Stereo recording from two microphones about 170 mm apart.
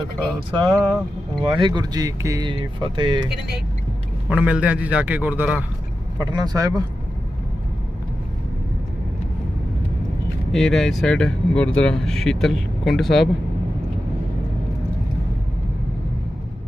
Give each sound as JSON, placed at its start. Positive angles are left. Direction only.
{"t": 0.5, "sound": "speech", "side_deg": -20}
{"t": 4.3, "sound": "a man's voice", "side_deg": -10}
{"t": 6.1, "sound": "speech", "side_deg": -25}
{"t": 10.5, "sound": "speech", "side_deg": 0}